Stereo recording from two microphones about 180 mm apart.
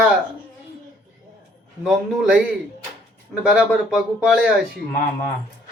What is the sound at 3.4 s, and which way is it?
Speech, 5° right (ahead or behind).